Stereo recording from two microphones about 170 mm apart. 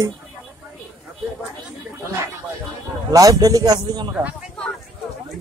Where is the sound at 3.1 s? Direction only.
20° right (ahead or behind).